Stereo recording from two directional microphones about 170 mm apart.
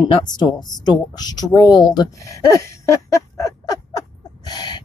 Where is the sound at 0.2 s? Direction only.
25° left (ahead or behind).